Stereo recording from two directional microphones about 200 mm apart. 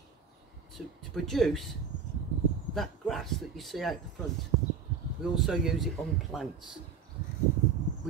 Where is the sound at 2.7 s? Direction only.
Centre (ahead or behind).